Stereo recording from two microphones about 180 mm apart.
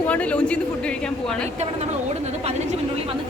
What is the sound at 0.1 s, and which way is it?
Speech, 5° left (ahead or behind).